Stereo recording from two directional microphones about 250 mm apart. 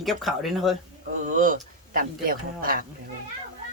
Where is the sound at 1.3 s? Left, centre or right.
Right.